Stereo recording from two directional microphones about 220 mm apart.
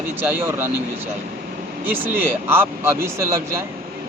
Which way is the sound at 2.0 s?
10° right (ahead or behind).